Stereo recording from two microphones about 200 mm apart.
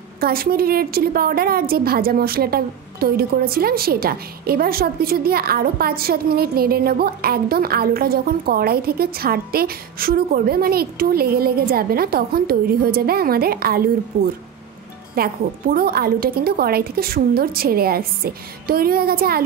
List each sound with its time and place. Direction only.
0.2 s a woman's voice: 50° right (ahead or behind)